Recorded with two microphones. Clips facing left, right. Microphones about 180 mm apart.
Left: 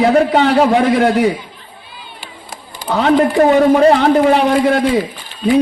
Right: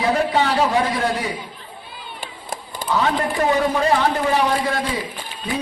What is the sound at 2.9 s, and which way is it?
A man's voice, 60° left (ahead or behind).